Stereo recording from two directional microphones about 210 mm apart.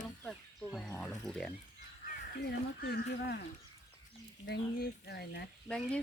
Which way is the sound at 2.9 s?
50° left (ahead or behind).